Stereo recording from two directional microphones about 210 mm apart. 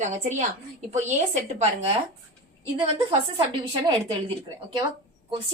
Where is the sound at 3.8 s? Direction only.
25° right (ahead or behind).